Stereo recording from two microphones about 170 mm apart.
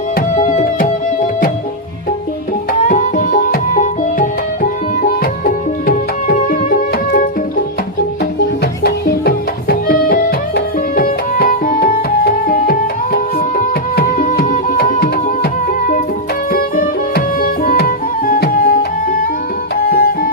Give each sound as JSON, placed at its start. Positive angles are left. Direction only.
{"t": 0.3, "sound": "music", "side_deg": 50}
{"t": 2.9, "sound": "music", "side_deg": 50}
{"t": 8.6, "sound": "music", "side_deg": 65}
{"t": 16.5, "sound": "music", "side_deg": 55}